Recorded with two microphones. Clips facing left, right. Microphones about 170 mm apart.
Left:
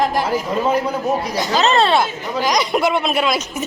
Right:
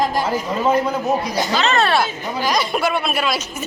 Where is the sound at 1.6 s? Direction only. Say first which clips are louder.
Left 4 dB; 35° left (ahead or behind).